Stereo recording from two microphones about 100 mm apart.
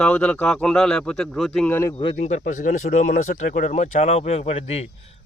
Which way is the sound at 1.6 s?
25° left (ahead or behind).